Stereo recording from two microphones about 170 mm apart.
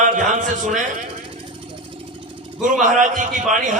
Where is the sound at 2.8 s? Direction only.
50° right (ahead or behind).